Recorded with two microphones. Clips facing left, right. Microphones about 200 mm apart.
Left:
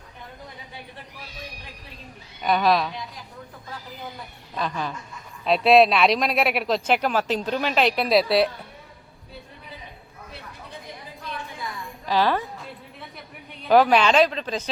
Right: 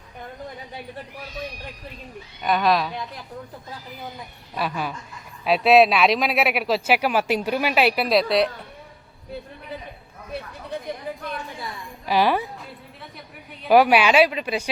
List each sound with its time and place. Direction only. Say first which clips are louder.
2.4 s speech: even; centre (ahead or behind)
4.5 s speech: right 1 dB; 10° right (ahead or behind)
11.1 s a sound: right 11 dB; 60° right (ahead or behind)
12.0 s speech: right 2 dB; 10° right (ahead or behind)
13.7 s speech: right 1 dB; 10° right (ahead or behind)